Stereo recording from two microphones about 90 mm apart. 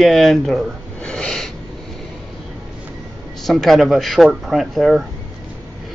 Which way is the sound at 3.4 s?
Centre (ahead or behind).